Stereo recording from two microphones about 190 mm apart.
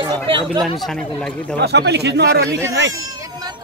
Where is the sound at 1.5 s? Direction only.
60° right (ahead or behind).